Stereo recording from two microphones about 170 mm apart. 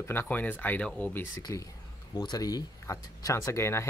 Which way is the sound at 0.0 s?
15° left (ahead or behind).